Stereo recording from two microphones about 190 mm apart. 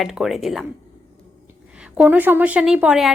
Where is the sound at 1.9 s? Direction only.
10° right (ahead or behind).